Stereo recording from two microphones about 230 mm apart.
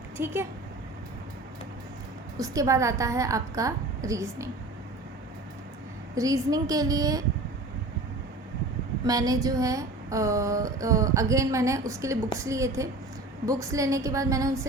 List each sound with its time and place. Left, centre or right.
0.2 s speech: centre
2.4 s speech: centre
6.1 s speech: centre
9.0 s speech: centre